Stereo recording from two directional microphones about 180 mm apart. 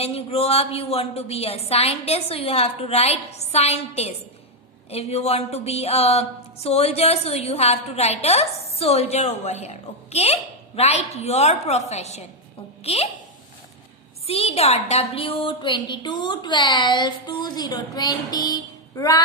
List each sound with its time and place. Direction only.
0.0 s a sound: 35° left (ahead or behind)
12.8 s a woman's voice: 35° left (ahead or behind)
14.3 s a woman's voice: 35° left (ahead or behind)